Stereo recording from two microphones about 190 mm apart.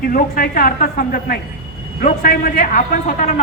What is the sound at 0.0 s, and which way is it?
A man's voice, 50° left (ahead or behind).